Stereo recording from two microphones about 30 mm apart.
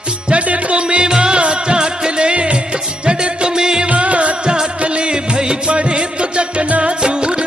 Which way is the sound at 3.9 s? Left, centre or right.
Right.